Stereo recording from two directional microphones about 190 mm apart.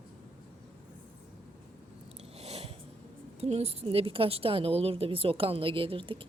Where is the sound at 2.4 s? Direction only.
35° right (ahead or behind).